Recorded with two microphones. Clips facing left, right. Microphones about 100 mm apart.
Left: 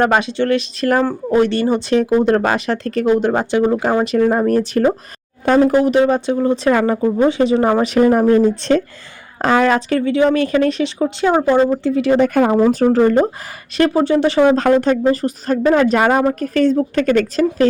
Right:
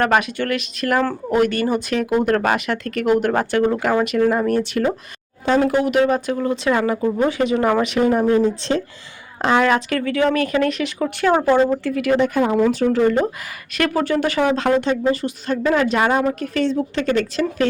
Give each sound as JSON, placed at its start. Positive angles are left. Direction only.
{"t": 0.0, "sound": "speech", "side_deg": 25}
{"t": 6.7, "sound": "speech", "side_deg": 40}
{"t": 7.0, "sound": "speech", "side_deg": 25}
{"t": 8.3, "sound": "speech", "side_deg": 55}
{"t": 9.4, "sound": "speech", "side_deg": 40}
{"t": 12.2, "sound": "speech", "side_deg": 50}
{"t": 12.5, "sound": "speech", "side_deg": 35}
{"t": 13.7, "sound": "speech", "side_deg": 25}
{"t": 14.5, "sound": "speech", "side_deg": 40}